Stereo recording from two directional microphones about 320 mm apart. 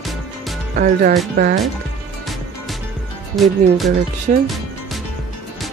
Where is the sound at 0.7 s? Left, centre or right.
Right.